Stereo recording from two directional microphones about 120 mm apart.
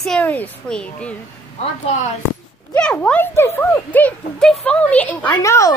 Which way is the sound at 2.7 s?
10° left (ahead or behind).